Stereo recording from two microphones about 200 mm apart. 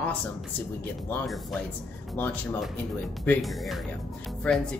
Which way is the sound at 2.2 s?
10° left (ahead or behind).